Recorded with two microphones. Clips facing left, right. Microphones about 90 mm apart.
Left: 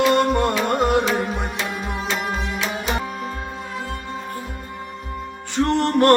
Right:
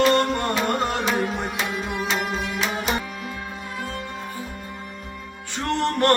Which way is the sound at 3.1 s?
35° left (ahead or behind).